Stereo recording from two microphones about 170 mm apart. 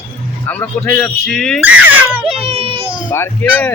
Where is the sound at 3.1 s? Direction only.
10° left (ahead or behind).